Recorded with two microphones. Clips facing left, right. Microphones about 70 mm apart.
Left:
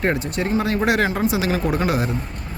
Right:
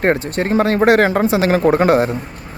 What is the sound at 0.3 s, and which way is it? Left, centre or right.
Speech, right.